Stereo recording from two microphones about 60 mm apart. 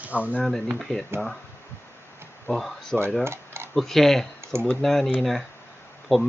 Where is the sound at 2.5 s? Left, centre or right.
Centre.